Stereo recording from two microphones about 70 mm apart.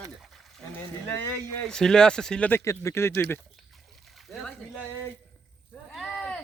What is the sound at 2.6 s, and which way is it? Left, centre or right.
Speech, left.